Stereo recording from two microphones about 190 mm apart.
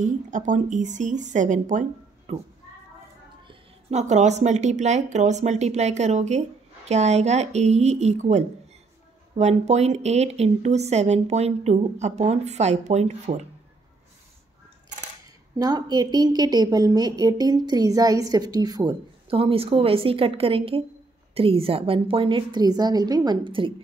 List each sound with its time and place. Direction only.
0.0 s speech: 40° right (ahead or behind)
3.4 s speech: 35° right (ahead or behind)
15.6 s a woman's voice: 20° right (ahead or behind)